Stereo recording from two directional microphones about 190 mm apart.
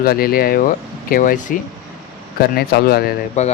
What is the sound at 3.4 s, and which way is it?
Speech, 35° left (ahead or behind).